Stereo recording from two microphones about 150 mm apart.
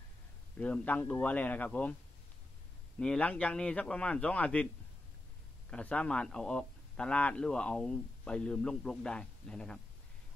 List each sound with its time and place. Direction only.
0.6 s a man's voice: 10° left (ahead or behind)
3.0 s a man's voice: 5° left (ahead or behind)
5.7 s speech: 10° left (ahead or behind)